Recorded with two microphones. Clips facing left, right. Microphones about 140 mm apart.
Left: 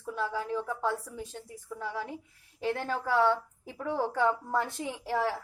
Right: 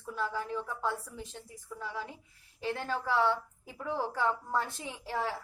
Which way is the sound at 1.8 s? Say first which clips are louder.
Left 4 dB; 55° left (ahead or behind).